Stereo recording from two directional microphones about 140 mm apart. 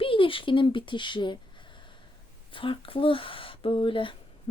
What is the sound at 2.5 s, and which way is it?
Speech, 40° left (ahead or behind).